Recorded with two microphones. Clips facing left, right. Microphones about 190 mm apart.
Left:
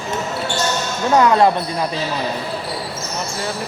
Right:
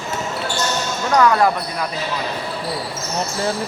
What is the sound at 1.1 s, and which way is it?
Speech, 25° left (ahead or behind).